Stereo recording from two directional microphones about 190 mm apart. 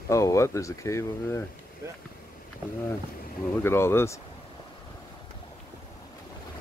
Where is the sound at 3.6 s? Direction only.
15° left (ahead or behind).